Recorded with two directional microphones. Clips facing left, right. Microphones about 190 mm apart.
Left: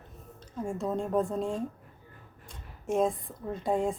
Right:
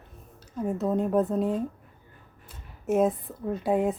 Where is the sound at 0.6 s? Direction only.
5° right (ahead or behind).